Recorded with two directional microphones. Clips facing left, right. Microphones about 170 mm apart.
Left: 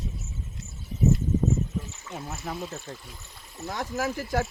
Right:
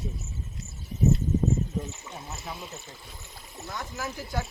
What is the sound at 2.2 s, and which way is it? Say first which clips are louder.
Speech: left 6 dB; 50° left (ahead or behind).